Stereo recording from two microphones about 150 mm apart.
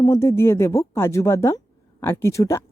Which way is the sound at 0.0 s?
20° left (ahead or behind).